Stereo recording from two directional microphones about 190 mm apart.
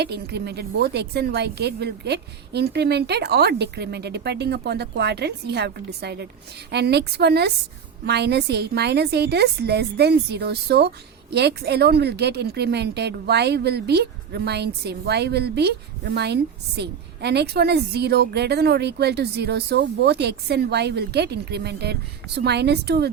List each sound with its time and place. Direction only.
0.0 s a woman's voice: 60° right (ahead or behind)